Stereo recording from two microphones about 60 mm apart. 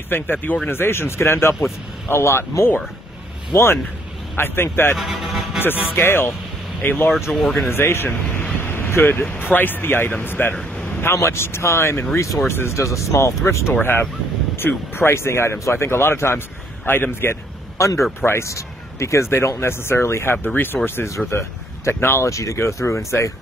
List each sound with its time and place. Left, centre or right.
0.1 s speech: left
4.9 s speech: centre
5.9 s speech: left
7.3 s speech: centre
7.7 s speech: left
8.5 s vehicle: left
9.4 s speech: left
10.5 s speech: centre
11.0 s speech: left
13.7 s speech: left
17.7 s speech: left